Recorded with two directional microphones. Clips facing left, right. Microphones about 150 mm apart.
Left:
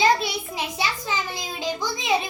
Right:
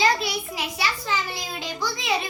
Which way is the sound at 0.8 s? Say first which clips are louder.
Right 1 dB; 20° left (ahead or behind).